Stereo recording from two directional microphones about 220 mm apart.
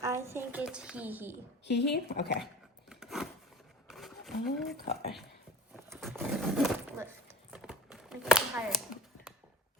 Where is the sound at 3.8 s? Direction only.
Centre (ahead or behind).